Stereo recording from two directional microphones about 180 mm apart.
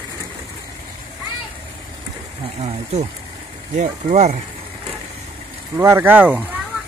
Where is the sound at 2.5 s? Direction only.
40° right (ahead or behind).